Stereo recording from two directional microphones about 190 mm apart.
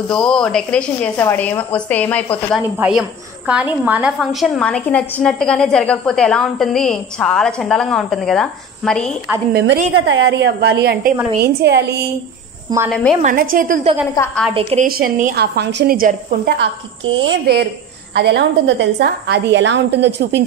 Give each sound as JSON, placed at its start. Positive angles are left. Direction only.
{"t": 0.1, "sound": "a woman's voice", "side_deg": 5}
{"t": 2.5, "sound": "a woman's voice", "side_deg": -5}
{"t": 9.5, "sound": "a woman's voice", "side_deg": -70}
{"t": 12.7, "sound": "a woman's voice", "side_deg": -20}
{"t": 13.2, "sound": "a woman's voice", "side_deg": -45}
{"t": 14.2, "sound": "a woman's voice", "side_deg": 20}
{"t": 14.5, "sound": "a woman's voice", "side_deg": -30}
{"t": 14.9, "sound": "a woman's voice", "side_deg": -50}
{"t": 17.1, "sound": "a woman's voice", "side_deg": -75}